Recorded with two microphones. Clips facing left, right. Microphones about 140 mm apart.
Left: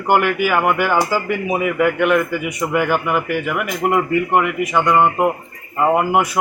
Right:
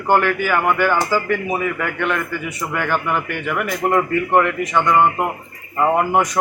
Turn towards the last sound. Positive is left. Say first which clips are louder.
# left 1 dB
turn(degrees=10)  # may be behind; listen again after turning